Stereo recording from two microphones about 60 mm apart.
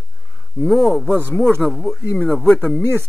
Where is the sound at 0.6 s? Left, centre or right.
Centre.